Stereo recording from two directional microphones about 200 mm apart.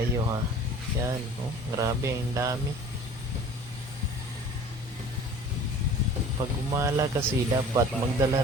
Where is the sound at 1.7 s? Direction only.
15° right (ahead or behind).